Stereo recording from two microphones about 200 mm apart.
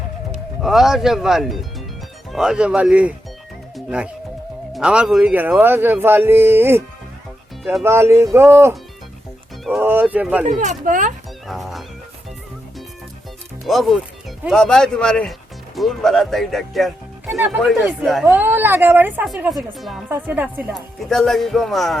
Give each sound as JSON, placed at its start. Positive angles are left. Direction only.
{"t": 0.6, "sound": "speech", "side_deg": 0}
{"t": 7.9, "sound": "speech", "side_deg": -10}
{"t": 10.6, "sound": "speech", "side_deg": -40}
{"t": 11.4, "sound": "music", "side_deg": 0}
{"t": 13.7, "sound": "speech", "side_deg": 0}
{"t": 21.0, "sound": "speech", "side_deg": 0}